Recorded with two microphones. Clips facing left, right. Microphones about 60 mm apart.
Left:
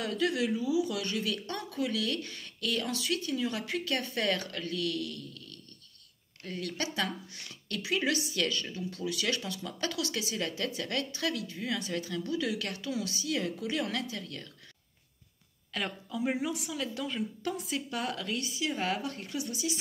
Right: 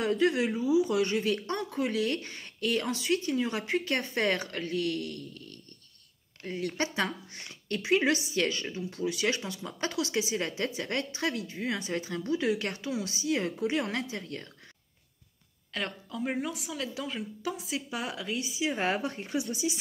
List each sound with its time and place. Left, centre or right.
0.0 s speech: right
6.6 s speech: right
15.7 s a woman's voice: centre
18.7 s speech: right